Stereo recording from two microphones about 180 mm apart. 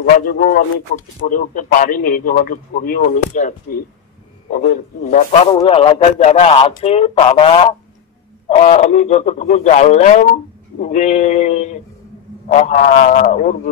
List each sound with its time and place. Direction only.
0.1 s a man's voice: 55° left (ahead or behind)
5.5 s a man's voice: 30° left (ahead or behind); by 13.6 s 45° left (ahead or behind)